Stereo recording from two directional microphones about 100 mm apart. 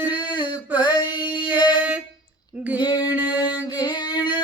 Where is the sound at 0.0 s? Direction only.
50° left (ahead or behind).